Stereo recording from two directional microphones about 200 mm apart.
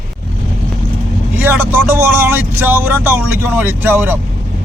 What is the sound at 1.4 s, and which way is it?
Speech, 10° right (ahead or behind).